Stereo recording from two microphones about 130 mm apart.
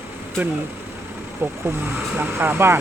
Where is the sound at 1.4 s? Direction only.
15° right (ahead or behind).